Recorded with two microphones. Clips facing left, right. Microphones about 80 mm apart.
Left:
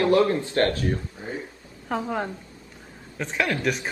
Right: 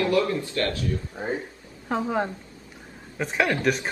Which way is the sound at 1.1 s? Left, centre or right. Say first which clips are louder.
Right 5 dB; right.